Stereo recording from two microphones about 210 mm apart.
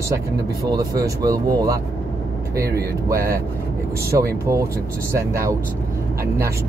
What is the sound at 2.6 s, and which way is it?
Speech, 45° right (ahead or behind).